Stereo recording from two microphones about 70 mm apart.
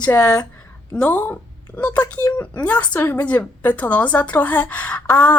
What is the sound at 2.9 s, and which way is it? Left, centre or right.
Speech, left.